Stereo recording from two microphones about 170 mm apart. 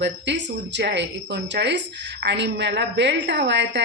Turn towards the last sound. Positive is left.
turn(degrees=-90)